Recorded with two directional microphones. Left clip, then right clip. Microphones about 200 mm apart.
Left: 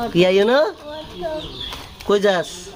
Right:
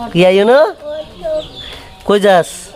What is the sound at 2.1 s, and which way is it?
Speech, 35° right (ahead or behind).